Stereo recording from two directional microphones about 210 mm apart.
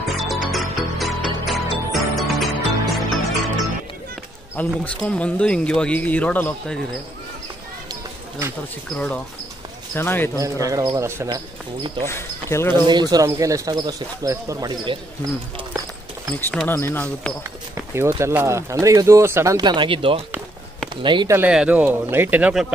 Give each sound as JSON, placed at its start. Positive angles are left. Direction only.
{"t": 0.0, "sound": "music", "side_deg": 0}
{"t": 4.6, "sound": "speech", "side_deg": 5}
{"t": 7.9, "sound": "a sound", "side_deg": -10}
{"t": 8.8, "sound": "speech", "side_deg": 0}
{"t": 10.4, "sound": "speech", "side_deg": -15}
{"t": 12.1, "sound": "speech", "side_deg": 10}
{"t": 13.1, "sound": "speech", "side_deg": -15}
{"t": 16.3, "sound": "speech", "side_deg": 10}
{"t": 17.9, "sound": "speech", "side_deg": -10}
{"t": 21.4, "sound": "speech", "side_deg": -5}